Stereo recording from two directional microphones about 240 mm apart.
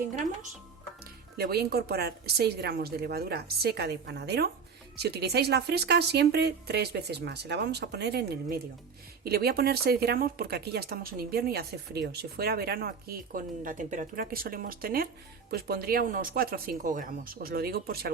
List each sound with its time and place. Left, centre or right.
1.4 s speech: right